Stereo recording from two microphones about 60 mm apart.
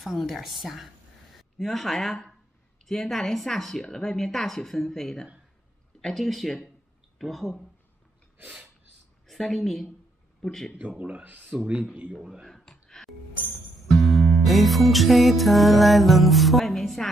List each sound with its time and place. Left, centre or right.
0.0 s a woman's voice: centre
9.3 s a woman's voice: centre
10.9 s speech: centre
11.5 s speech: centre
12.1 s speech: centre
12.4 s a sound: centre
13.8 s music: centre